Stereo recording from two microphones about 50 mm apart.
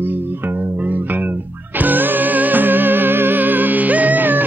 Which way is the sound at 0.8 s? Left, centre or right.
Right.